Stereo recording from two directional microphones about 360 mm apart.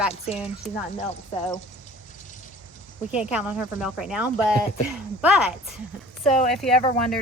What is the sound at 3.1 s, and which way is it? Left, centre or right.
Speech, centre.